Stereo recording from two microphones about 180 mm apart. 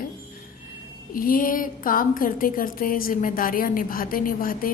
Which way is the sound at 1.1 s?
50° left (ahead or behind).